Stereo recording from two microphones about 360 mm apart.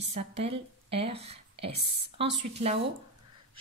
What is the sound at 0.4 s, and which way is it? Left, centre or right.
Speech, centre.